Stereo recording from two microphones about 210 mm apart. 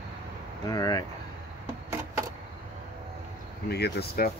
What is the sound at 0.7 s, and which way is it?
Speech, 15° left (ahead or behind).